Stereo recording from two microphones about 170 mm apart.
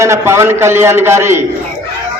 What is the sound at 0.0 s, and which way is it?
A man's voice, 15° right (ahead or behind).